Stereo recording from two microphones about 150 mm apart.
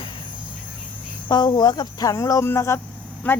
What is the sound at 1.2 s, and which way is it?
Speech, 30° left (ahead or behind).